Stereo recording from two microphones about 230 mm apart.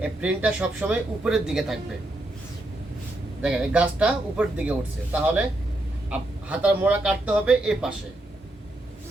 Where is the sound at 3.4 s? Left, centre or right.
Centre.